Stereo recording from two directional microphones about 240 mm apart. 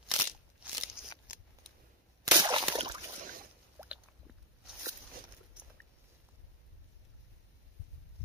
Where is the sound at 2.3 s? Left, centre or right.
Centre.